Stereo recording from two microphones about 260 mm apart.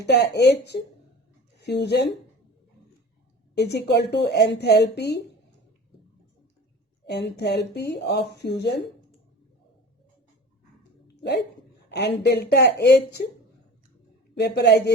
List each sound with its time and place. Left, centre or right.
0.0 s a woman's voice: left
3.5 s a woman's voice: left
7.1 s a woman's voice: left
11.9 s a woman's voice: left
14.3 s a woman's voice: left